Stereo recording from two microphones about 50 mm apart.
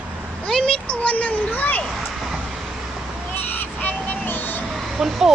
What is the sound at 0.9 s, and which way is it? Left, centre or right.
Speech, left.